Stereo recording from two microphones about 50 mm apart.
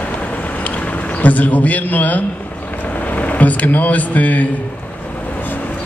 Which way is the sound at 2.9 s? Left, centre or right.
Left.